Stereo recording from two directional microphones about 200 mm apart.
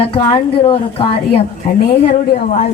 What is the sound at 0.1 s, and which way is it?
A woman's voice, 25° left (ahead or behind).